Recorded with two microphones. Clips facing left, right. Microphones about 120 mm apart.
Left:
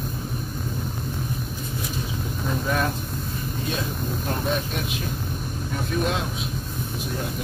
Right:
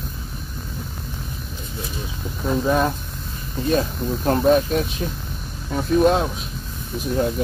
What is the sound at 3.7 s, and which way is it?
Speech, 45° right (ahead or behind).